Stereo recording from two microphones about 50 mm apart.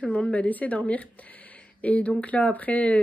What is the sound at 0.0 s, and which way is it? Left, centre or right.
Speech, left.